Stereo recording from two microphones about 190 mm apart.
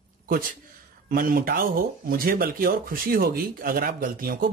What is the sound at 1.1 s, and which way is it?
Speech, 50° right (ahead or behind).